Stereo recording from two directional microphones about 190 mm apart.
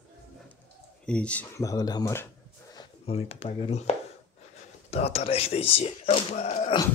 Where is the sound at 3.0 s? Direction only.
30° left (ahead or behind).